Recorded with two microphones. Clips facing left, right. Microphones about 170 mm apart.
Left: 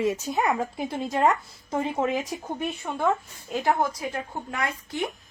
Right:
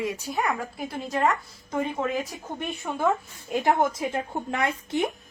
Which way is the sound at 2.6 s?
Centre (ahead or behind).